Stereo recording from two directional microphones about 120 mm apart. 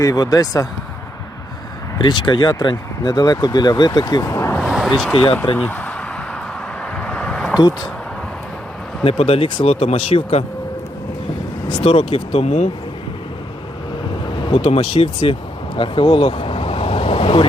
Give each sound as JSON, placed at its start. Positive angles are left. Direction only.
{"t": 0.0, "sound": "speech", "side_deg": 30}
{"t": 2.0, "sound": "speech", "side_deg": 40}
{"t": 4.6, "sound": "a sound", "side_deg": -5}
{"t": 5.5, "sound": "speech", "side_deg": 15}
{"t": 7.0, "sound": "a sound", "side_deg": 10}
{"t": 9.0, "sound": "speech", "side_deg": 55}
{"t": 11.7, "sound": "speech", "side_deg": 55}
{"t": 14.4, "sound": "speech", "side_deg": 50}